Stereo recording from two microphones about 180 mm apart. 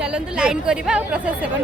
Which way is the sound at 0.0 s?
5° right (ahead or behind).